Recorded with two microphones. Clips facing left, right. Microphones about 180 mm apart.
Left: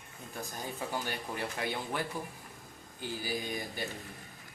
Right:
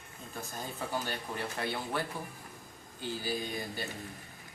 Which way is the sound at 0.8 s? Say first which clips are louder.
Right 1 dB; 15° left (ahead or behind).